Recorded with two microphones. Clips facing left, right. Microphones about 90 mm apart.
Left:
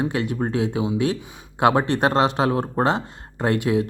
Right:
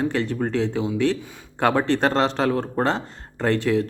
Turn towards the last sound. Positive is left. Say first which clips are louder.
# even
turn(degrees=15)  # may be behind; listen again after turning